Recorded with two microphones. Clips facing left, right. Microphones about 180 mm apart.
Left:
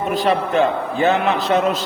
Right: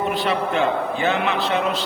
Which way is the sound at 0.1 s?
40° left (ahead or behind).